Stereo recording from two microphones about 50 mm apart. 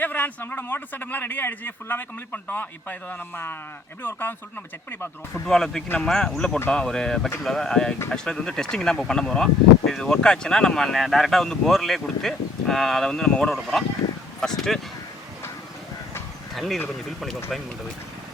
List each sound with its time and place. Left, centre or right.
0.0 s speech: left
5.3 s speech: centre
16.6 s speech: centre